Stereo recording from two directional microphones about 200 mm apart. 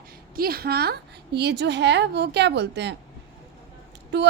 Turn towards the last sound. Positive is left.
turn(degrees=-60)  # may be behind; listen again after turning